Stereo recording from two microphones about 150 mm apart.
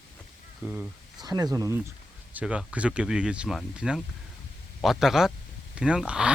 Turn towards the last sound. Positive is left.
turn(degrees=-5)  # may be behind; listen again after turning